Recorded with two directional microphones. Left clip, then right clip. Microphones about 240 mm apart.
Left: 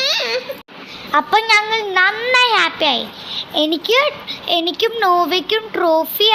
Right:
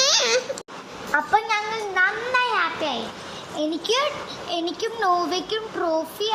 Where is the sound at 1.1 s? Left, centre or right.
Left.